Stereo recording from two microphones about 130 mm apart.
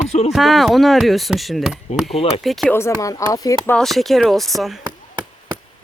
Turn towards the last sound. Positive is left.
turn(degrees=0)  # may be behind; listen again after turning